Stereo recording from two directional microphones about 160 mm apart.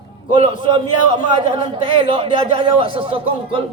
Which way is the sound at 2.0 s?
35° right (ahead or behind).